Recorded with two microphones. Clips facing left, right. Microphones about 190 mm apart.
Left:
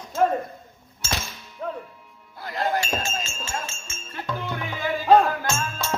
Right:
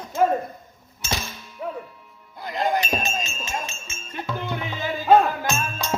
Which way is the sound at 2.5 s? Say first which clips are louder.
Right 2 dB; 20° right (ahead or behind).